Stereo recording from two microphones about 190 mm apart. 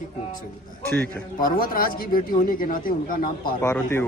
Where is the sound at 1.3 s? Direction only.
50° left (ahead or behind).